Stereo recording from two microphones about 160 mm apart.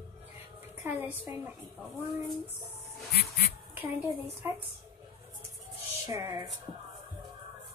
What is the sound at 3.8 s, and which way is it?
Speech, 10° right (ahead or behind).